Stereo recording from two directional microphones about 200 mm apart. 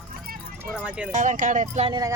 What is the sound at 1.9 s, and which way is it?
Speech, 15° right (ahead or behind).